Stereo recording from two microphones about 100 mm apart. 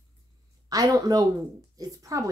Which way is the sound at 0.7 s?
40° right (ahead or behind).